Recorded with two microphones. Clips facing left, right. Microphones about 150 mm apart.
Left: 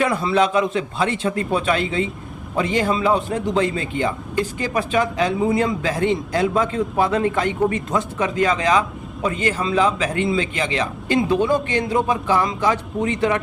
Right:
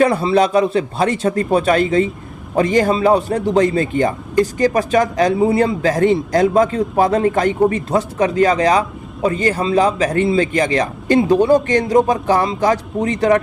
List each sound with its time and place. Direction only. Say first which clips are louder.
0.0 s a man's voice: right 5 dB; 30° right (ahead or behind)